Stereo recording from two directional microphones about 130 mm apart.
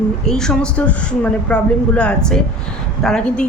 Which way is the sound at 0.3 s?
5° left (ahead or behind).